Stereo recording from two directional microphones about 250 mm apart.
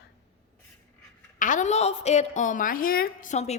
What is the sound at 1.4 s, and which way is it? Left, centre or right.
A woman's voice, left.